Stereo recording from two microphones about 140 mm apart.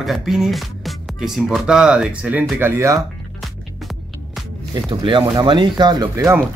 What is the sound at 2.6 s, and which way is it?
Speech, 20° right (ahead or behind).